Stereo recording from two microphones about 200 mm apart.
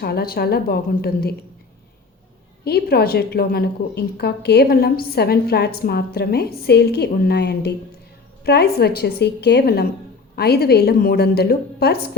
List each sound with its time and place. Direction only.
0.0 s a woman's voice: 50° left (ahead or behind)
2.6 s a woman's voice: 50° left (ahead or behind)